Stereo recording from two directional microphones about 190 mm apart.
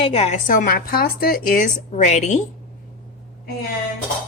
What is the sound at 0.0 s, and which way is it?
Speech, 35° left (ahead or behind).